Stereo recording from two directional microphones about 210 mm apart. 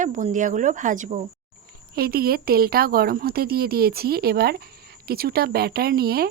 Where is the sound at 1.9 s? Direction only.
45° right (ahead or behind).